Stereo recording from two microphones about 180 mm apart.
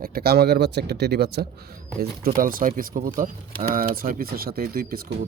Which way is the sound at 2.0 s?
55° right (ahead or behind).